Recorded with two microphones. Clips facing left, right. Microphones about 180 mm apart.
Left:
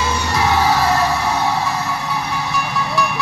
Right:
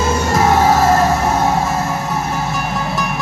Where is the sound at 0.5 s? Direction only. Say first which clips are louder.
Right 4 dB; 45° right (ahead or behind).